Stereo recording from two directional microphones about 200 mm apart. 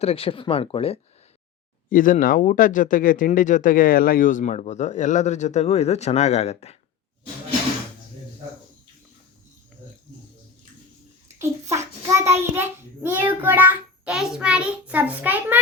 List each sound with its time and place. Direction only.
0.0 s speech: 30° left (ahead or behind)
1.9 s speech: 45° left (ahead or behind)
11.3 s child singing: 15° right (ahead or behind)